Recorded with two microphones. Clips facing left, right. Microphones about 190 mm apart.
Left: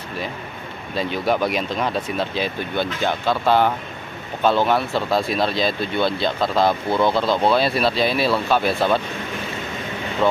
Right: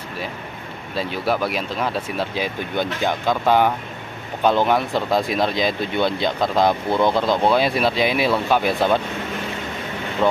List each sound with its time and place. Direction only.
0.9 s speech: 5° right (ahead or behind)